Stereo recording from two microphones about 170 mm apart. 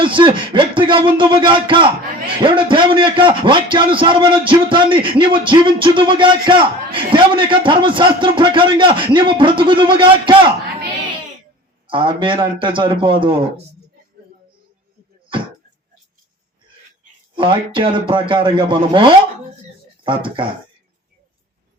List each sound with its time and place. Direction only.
0.0 s speech: 30° right (ahead or behind)
11.9 s speech: 30° right (ahead or behind)
17.3 s speech: 30° right (ahead or behind)